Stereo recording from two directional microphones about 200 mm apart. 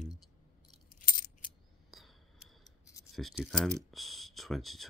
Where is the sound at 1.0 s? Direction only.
45° left (ahead or behind).